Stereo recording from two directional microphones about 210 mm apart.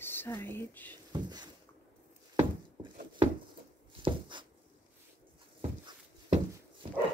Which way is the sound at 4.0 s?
20° right (ahead or behind).